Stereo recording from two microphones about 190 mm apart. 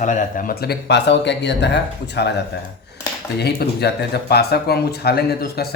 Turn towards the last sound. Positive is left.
turn(degrees=55)  # may be behind; listen again after turning